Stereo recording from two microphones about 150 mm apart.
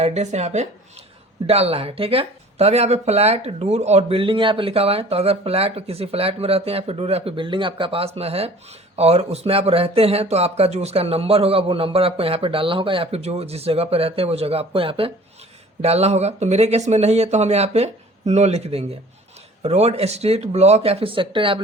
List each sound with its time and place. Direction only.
0.0 s speech: 50° right (ahead or behind)